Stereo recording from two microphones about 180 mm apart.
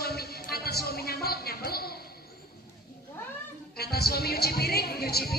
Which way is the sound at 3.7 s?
60° left (ahead or behind).